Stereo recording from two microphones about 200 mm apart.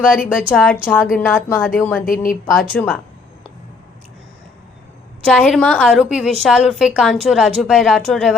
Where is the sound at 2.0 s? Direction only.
45° left (ahead or behind).